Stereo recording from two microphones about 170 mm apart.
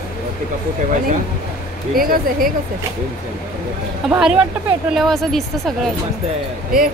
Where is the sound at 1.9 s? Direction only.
60° right (ahead or behind).